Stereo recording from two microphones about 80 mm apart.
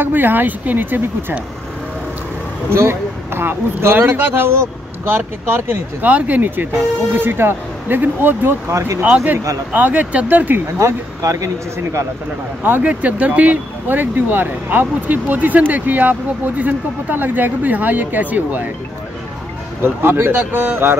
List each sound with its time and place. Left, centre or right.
0.0 s speech: right
2.7 s speech: right
8.6 s speech: right
9.0 s speech: right
10.8 s speech: right
12.6 s speech: right
19.8 s speech: right